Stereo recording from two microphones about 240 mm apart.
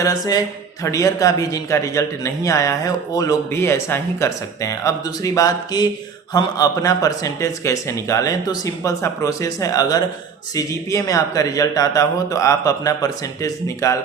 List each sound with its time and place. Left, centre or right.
0.0 s a man's voice: centre